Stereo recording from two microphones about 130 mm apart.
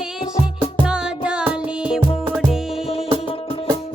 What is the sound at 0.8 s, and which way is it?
Music, 5° right (ahead or behind).